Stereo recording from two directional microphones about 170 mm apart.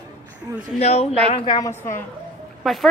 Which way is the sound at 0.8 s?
40° left (ahead or behind).